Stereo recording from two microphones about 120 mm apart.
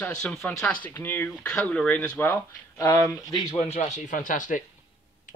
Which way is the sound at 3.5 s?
65° left (ahead or behind).